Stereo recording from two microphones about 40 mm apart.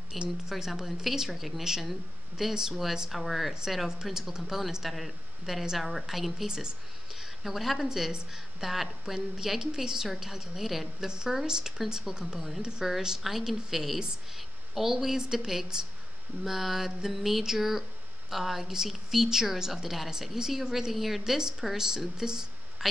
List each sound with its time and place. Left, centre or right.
0.1 s speech: centre
11.1 s speech: centre
21.2 s speech: centre